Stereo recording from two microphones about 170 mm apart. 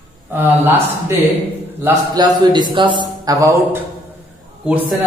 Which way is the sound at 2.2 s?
25° right (ahead or behind).